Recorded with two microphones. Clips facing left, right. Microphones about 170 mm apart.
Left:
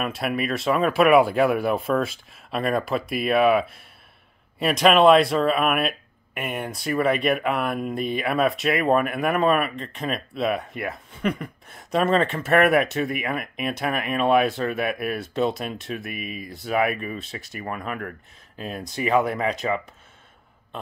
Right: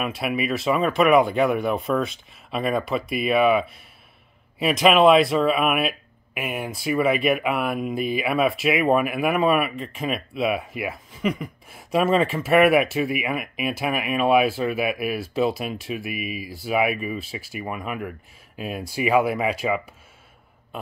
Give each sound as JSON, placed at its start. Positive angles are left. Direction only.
{"t": 0.0, "sound": "speech", "side_deg": -5}